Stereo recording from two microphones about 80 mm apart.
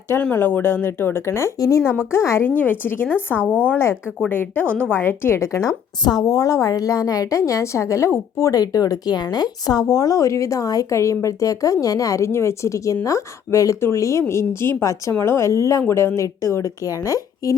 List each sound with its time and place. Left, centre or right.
0.1 s a woman's voice: left
4.6 s a woman's voice: right
4.9 s a woman's voice: left
6.0 s a woman's voice: left